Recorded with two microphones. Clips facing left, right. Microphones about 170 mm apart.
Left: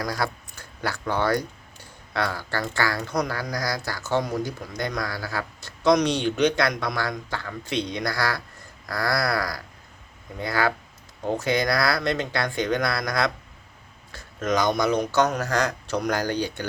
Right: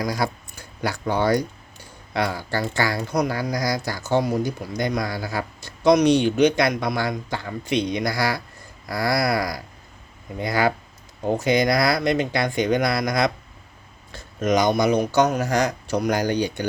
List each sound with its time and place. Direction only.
0.0 s speech: 15° right (ahead or behind)
14.1 s a sound: 20° right (ahead or behind)
14.8 s speech: 10° right (ahead or behind)